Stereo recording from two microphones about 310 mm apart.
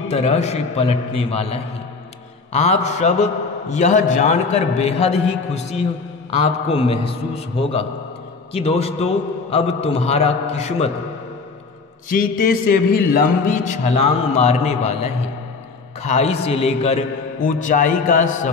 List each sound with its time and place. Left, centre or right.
0.1 s a man's voice: centre
12.1 s a man's voice: left